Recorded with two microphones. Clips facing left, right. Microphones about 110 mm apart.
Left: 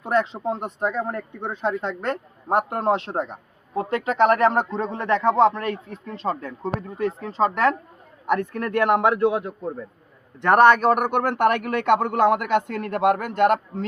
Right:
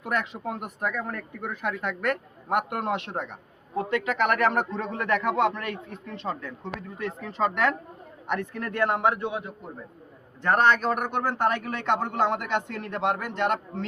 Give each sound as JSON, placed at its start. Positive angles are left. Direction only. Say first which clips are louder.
{"t": 0.0, "sound": "speech", "louder": "left 7 dB", "side_deg": 30}
{"t": 8.3, "sound": "a man's voice", "louder": "left 7 dB", "side_deg": 50}
{"t": 10.4, "sound": "a man's voice", "louder": "left 7 dB", "side_deg": 60}